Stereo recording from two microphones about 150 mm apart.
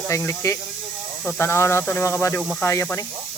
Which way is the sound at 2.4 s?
Centre (ahead or behind).